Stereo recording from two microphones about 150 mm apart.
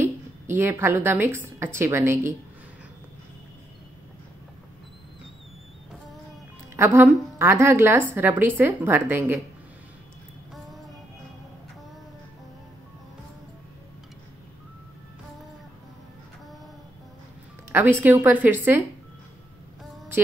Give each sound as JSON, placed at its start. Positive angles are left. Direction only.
{"t": 0.0, "sound": "a woman's voice", "side_deg": -15}
{"t": 6.8, "sound": "a woman's voice", "side_deg": -15}
{"t": 17.7, "sound": "a woman's voice", "side_deg": -15}